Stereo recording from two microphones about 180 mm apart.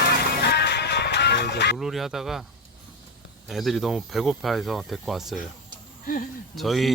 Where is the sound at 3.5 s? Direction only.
Centre (ahead or behind).